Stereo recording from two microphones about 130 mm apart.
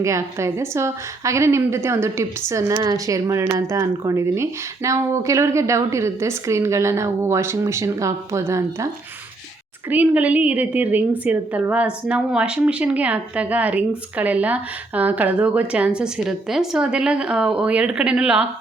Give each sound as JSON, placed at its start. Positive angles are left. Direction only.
{"t": 0.0, "sound": "speech", "side_deg": -20}
{"t": 9.9, "sound": "a woman's voice", "side_deg": -10}